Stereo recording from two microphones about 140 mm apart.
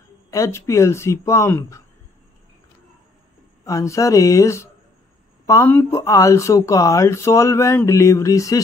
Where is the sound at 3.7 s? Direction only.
20° left (ahead or behind).